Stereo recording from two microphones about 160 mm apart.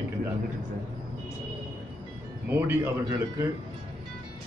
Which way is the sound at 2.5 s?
15° right (ahead or behind).